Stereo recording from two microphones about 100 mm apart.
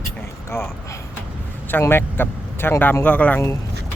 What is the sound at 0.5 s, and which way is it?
Speech, 25° left (ahead or behind).